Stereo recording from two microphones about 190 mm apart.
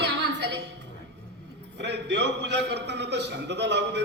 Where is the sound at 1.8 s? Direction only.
65° right (ahead or behind).